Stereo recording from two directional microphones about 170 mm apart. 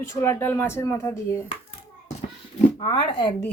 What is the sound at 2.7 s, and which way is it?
Speech, 30° left (ahead or behind).